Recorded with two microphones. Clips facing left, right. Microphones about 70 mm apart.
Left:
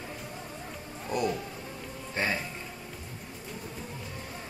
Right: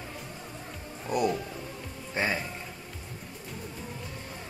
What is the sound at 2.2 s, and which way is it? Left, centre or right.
Speech, centre.